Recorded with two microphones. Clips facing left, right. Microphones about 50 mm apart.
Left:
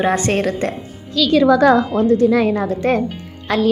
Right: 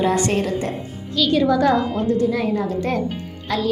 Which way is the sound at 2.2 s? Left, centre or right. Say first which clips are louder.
Left 5 dB; left.